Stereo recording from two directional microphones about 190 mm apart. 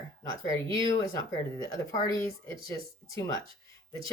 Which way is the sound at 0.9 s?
15° left (ahead or behind).